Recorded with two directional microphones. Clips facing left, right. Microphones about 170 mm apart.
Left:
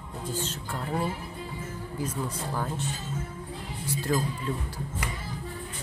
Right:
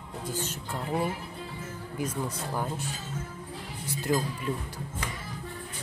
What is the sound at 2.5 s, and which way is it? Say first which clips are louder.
Speech: even; 15° right (ahead or behind).